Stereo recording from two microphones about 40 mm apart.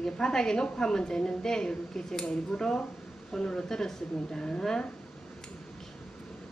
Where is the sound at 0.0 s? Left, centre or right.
Centre.